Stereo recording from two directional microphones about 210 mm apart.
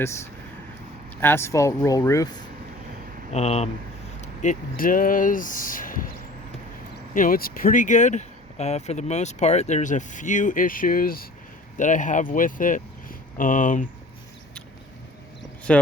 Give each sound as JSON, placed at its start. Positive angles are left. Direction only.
{"t": 1.2, "sound": "speech", "side_deg": 10}
{"t": 3.3, "sound": "speech", "side_deg": 30}
{"t": 7.1, "sound": "speech", "side_deg": 40}
{"t": 15.7, "sound": "speech", "side_deg": 5}